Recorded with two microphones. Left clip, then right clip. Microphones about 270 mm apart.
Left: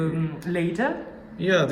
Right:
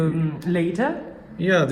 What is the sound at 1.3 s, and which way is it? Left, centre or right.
Speech, centre.